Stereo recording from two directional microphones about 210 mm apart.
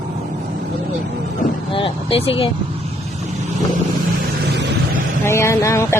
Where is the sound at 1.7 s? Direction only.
25° left (ahead or behind).